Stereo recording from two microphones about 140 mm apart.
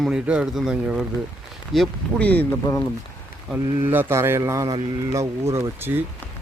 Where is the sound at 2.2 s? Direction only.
10° left (ahead or behind).